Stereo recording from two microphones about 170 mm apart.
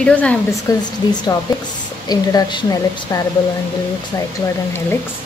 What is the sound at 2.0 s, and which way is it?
A woman's voice, 25° left (ahead or behind).